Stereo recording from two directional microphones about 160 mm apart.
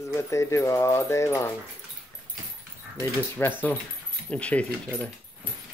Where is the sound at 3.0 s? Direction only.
10° left (ahead or behind).